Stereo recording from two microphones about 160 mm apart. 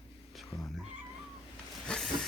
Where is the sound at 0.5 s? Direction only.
30° left (ahead or behind).